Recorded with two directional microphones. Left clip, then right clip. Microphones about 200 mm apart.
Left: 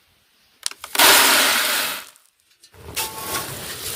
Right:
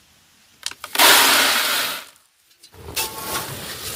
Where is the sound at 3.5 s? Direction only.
20° left (ahead or behind).